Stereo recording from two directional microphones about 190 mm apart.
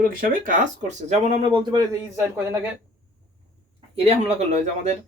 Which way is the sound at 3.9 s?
35° right (ahead or behind).